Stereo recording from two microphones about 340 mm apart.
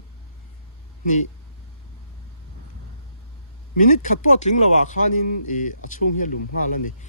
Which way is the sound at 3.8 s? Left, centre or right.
Left.